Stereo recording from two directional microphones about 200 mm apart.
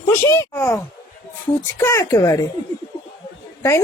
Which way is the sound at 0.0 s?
15° left (ahead or behind).